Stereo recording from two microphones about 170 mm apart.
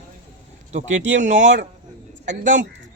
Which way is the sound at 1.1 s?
45° right (ahead or behind).